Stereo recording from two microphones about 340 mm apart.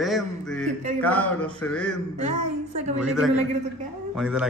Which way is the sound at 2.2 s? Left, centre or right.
Centre.